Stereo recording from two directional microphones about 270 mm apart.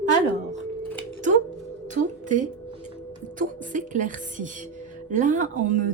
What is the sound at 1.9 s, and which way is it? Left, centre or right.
A woman's voice, right.